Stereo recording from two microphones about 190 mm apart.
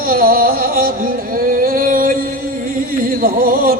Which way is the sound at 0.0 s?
50° right (ahead or behind).